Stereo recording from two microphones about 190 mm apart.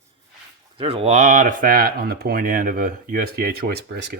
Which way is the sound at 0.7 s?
30° right (ahead or behind).